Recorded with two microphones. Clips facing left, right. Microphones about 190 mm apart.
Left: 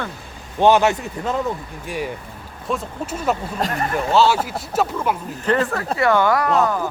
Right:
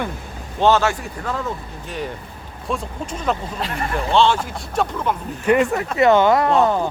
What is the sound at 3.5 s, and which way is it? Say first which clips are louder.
Speech: left 2 dB; 40° left (ahead or behind).